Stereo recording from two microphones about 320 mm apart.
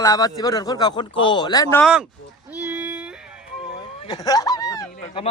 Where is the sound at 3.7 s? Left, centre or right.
Centre.